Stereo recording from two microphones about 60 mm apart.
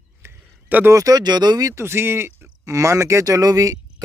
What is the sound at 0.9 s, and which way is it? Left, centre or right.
Speech, right.